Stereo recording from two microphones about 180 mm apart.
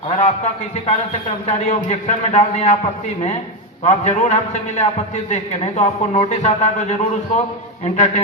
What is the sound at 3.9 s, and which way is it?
A man's voice, 40° left (ahead or behind).